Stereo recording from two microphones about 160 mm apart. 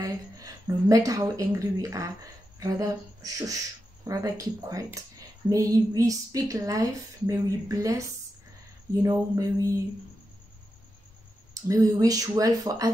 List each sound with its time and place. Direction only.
0.0 s a woman's voice: 20° right (ahead or behind)
9.0 s a woman's voice: 20° right (ahead or behind)
11.6 s a woman's voice: 20° right (ahead or behind)